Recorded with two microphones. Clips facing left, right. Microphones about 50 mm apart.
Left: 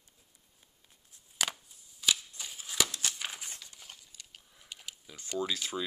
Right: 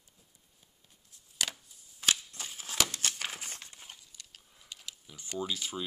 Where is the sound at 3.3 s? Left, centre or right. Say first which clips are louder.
Right 2 dB; right.